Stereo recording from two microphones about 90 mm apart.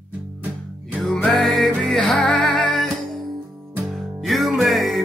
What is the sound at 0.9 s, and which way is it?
Music, 10° left (ahead or behind).